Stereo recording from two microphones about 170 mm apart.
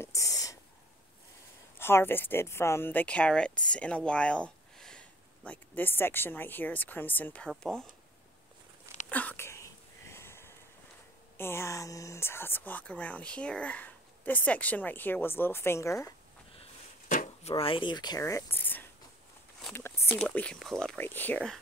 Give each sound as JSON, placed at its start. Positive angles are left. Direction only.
{"t": 0.0, "sound": "whispering", "side_deg": 20}
{"t": 1.8, "sound": "speech", "side_deg": 15}
{"t": 9.1, "sound": "a sound", "side_deg": 10}
{"t": 11.3, "sound": "speech", "side_deg": 15}
{"t": 17.4, "sound": "speech", "side_deg": 35}